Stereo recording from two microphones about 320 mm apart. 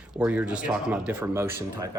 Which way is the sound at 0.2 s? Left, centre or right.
Centre.